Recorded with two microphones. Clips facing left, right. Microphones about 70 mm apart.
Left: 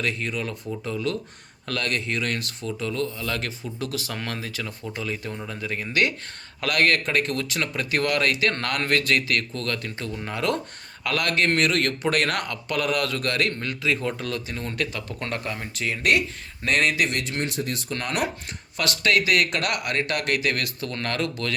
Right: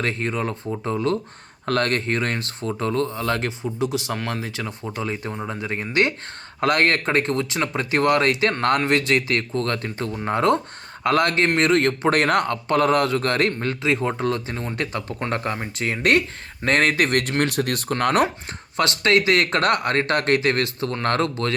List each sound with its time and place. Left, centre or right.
0.0 s a man's voice: right
3.4 s a man's voice: right
15.3 s a man's voice: right
18.0 s a man's voice: right